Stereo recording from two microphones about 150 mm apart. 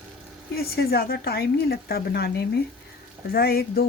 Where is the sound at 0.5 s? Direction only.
90° left.